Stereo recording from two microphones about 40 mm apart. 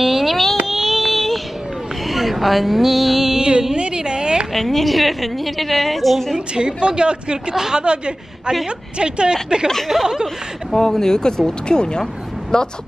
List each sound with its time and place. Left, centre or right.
0.0 s a sound: centre
0.7 s child singing: centre
2.0 s speech: centre
3.7 s a sound: right
4.6 s a woman's voice: centre
6.3 s a woman's voice: right
10.2 s speech: centre
12.0 s vehicle: centre